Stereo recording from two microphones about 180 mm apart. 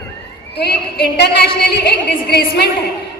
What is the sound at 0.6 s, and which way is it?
A woman's voice, 65° left (ahead or behind).